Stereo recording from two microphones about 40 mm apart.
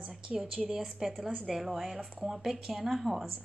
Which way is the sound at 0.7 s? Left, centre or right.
Centre.